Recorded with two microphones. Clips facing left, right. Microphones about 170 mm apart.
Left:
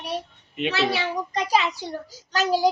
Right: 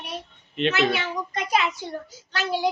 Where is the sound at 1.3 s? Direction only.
35° left (ahead or behind).